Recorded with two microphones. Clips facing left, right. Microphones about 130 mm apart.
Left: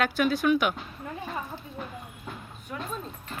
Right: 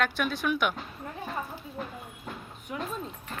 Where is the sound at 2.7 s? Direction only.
10° right (ahead or behind).